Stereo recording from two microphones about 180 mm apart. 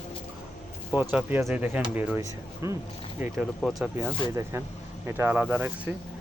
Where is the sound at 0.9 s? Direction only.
10° right (ahead or behind).